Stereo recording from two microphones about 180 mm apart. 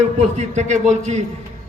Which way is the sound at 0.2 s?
40° right (ahead or behind).